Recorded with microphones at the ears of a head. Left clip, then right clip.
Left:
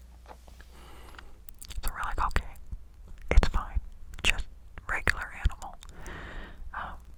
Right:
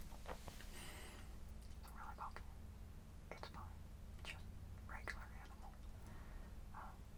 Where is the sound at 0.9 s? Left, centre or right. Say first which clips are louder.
Left 8 dB; left.